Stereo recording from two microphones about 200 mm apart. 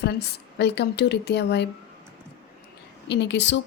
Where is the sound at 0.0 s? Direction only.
55° left (ahead or behind).